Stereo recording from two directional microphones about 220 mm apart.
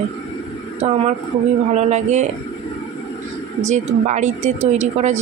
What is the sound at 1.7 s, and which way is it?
Speech, 30° right (ahead or behind).